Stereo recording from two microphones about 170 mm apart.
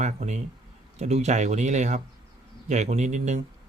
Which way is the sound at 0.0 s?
45° right (ahead or behind).